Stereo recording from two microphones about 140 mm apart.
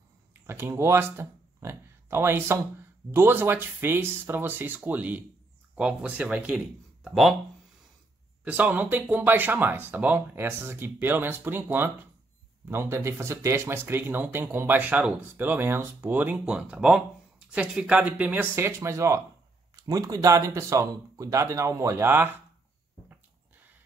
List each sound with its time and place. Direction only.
0.3 s speech: 15° right (ahead or behind); by 7.3 s centre (ahead or behind)
8.5 s speech: 10° right (ahead or behind)
12.9 s speech: 20° right (ahead or behind)